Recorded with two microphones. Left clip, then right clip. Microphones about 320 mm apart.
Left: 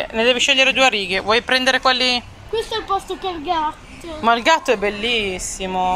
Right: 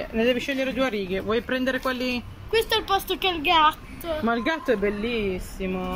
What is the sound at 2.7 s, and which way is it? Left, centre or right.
Speech, centre.